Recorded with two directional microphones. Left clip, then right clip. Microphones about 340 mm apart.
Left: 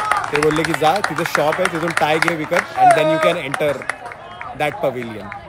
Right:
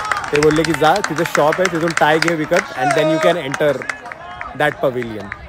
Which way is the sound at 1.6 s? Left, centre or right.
Centre.